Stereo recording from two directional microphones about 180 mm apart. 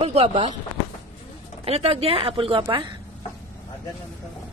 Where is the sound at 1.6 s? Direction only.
35° right (ahead or behind).